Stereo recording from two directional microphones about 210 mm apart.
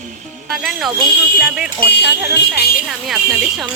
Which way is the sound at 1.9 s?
50° left (ahead or behind).